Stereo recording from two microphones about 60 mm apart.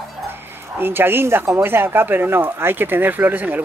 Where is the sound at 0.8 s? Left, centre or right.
Right.